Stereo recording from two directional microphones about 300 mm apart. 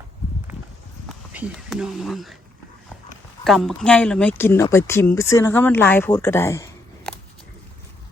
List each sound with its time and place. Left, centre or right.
1.0 s speech: centre
3.4 s speech: centre